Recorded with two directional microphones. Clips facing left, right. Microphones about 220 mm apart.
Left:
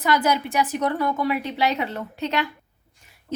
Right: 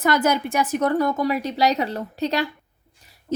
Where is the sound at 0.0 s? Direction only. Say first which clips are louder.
Right 2 dB; 45° right (ahead or behind).